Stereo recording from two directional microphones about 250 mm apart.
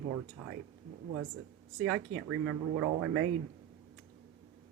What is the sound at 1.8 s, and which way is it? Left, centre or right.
Speech, right.